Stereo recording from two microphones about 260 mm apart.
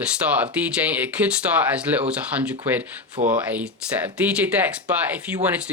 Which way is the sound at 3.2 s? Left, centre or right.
Right.